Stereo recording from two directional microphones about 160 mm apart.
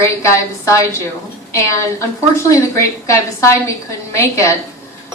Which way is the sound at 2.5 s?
20° left (ahead or behind).